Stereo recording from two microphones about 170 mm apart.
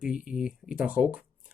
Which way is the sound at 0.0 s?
5° right (ahead or behind).